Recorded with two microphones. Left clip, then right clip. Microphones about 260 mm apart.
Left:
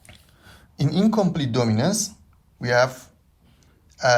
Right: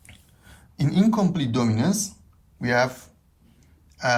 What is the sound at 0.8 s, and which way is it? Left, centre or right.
Speech, centre.